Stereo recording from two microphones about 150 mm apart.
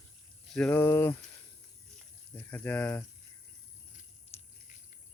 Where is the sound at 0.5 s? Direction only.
5° left (ahead or behind).